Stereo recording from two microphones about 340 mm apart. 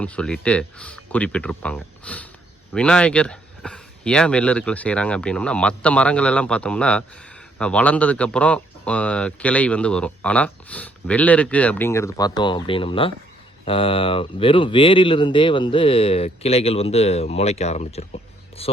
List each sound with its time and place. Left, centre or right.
0.0 s speech: centre